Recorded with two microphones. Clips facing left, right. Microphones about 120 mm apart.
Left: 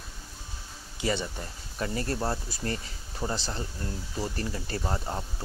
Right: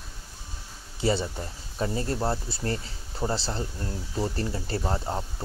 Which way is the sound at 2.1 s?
5° right (ahead or behind).